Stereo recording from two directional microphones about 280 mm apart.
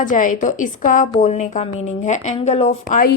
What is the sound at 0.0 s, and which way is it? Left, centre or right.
A woman's voice, left.